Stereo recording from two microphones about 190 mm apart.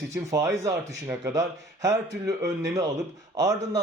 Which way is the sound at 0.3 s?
15° right (ahead or behind).